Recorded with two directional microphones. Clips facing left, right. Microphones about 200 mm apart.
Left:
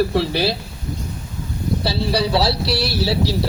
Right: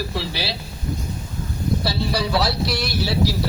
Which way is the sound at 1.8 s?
30° left (ahead or behind).